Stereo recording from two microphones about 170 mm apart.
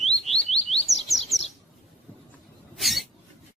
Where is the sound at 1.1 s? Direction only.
Centre (ahead or behind).